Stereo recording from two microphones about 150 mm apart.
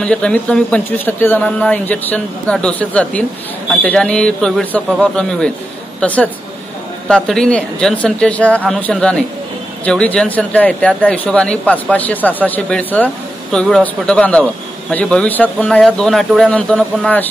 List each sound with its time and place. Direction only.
0.0 s speech: 5° left (ahead or behind)